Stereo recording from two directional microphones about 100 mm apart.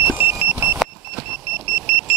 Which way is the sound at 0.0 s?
20° right (ahead or behind).